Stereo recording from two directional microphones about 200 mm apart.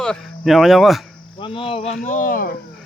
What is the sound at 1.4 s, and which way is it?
Cricket, 25° left (ahead or behind).